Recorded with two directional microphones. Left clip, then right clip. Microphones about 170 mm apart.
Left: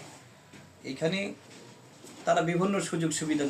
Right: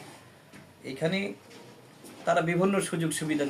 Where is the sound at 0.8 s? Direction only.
20° right (ahead or behind).